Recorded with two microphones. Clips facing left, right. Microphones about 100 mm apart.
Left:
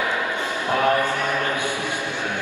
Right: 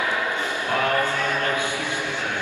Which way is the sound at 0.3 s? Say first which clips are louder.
Left 1 dB; 20° left (ahead or behind).